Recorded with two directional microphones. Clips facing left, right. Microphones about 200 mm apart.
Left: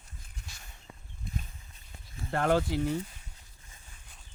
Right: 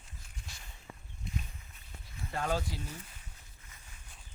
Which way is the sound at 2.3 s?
65° left (ahead or behind).